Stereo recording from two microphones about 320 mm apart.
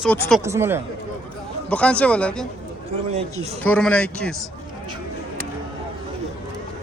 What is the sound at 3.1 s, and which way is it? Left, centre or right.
Speech, centre.